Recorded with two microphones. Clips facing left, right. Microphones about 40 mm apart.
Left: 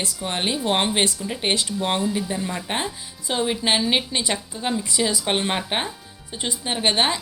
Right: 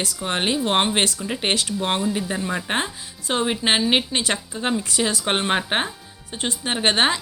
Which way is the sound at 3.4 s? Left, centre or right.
Right.